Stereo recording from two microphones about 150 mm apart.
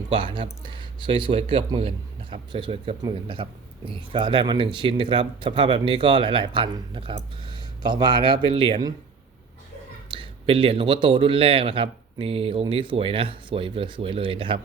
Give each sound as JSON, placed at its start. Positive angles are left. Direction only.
{"t": 0.1, "sound": "speech", "side_deg": -30}
{"t": 10.1, "sound": "speech", "side_deg": -35}